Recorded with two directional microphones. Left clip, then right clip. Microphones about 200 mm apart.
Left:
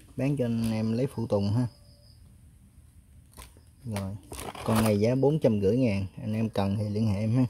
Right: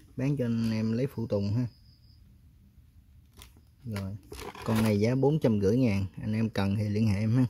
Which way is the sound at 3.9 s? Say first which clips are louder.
Left 3 dB; centre (ahead or behind).